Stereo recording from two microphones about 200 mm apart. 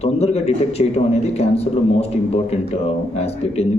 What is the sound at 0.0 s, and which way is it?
Speech, 30° left (ahead or behind).